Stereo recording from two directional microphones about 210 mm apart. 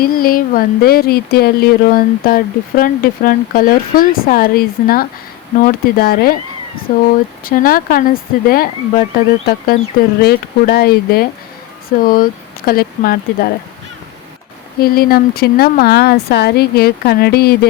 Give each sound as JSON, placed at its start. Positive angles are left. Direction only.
{"t": 0.0, "sound": "speech", "side_deg": 45}
{"t": 14.8, "sound": "speech", "side_deg": 45}